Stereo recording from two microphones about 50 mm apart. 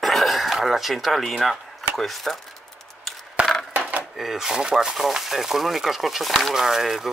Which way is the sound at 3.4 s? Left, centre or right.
Right.